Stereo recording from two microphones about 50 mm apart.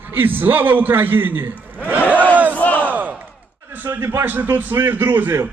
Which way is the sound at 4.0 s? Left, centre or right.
Right.